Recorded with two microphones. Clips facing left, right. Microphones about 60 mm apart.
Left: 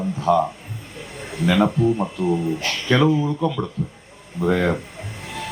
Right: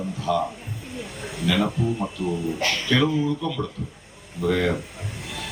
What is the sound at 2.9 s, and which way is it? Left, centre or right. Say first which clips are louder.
Speech: left 5 dB; left.